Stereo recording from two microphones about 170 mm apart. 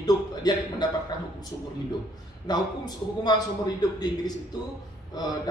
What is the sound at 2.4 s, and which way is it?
A man's voice, 25° left (ahead or behind).